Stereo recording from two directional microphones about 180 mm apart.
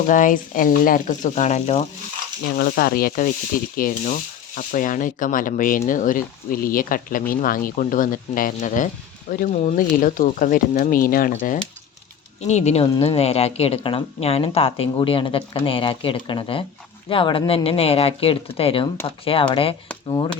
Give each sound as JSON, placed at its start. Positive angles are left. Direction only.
{"t": 0.1, "sound": "speech", "side_deg": 45}
{"t": 2.6, "sound": "sanding", "side_deg": 55}
{"t": 3.8, "sound": "speech", "side_deg": 50}
{"t": 12.4, "sound": "a woman's voice", "side_deg": 40}